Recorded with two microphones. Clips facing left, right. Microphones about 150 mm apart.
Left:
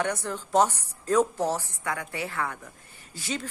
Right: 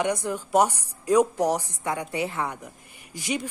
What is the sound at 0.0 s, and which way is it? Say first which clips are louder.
A woman's voice: right 3 dB; 15° right (ahead or behind).